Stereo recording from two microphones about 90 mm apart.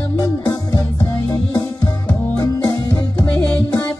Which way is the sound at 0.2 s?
40° left (ahead or behind).